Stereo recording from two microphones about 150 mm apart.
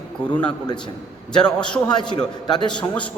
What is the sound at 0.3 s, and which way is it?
Speech, 10° left (ahead or behind).